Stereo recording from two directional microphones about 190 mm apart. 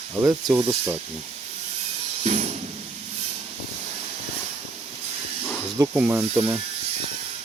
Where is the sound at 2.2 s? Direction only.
35° right (ahead or behind).